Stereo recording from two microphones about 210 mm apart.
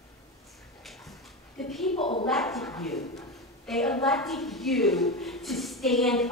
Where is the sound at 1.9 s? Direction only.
25° left (ahead or behind).